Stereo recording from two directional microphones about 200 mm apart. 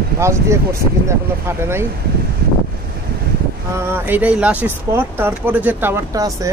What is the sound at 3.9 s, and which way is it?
Speech, 10° right (ahead or behind).